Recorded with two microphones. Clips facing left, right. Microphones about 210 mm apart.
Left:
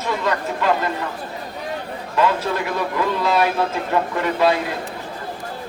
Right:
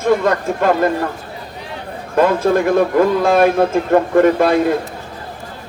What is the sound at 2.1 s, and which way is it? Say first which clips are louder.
A man's voice: right 7 dB; 50° right (ahead or behind).